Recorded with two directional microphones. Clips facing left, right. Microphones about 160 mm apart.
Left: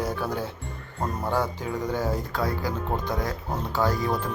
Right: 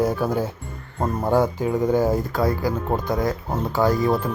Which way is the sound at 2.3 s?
10° right (ahead or behind).